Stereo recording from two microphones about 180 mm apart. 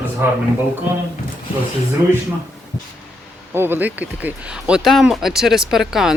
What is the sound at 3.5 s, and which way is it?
Speech, 10° right (ahead or behind).